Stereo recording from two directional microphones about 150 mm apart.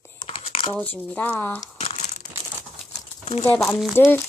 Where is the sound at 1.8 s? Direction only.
45° left (ahead or behind).